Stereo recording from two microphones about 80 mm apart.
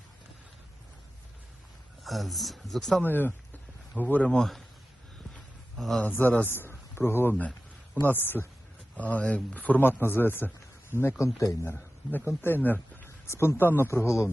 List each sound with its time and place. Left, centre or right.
2.0 s speech: centre
3.0 s speech: left
5.7 s speech: centre
6.1 s a man's voice: left
13.1 s a man's voice: left